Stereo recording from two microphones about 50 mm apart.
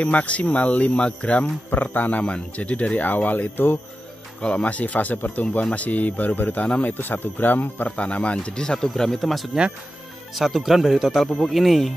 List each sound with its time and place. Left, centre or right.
0.0 s speech: left
4.4 s speech: left
7.9 s speech: left; by 11.2 s centre
11.2 s speech: centre